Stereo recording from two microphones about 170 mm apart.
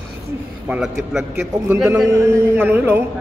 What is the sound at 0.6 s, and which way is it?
A man's voice, 5° right (ahead or behind).